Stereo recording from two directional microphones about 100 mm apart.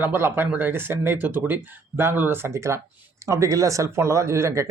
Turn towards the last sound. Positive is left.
turn(degrees=-30)  # may be behind; listen again after turning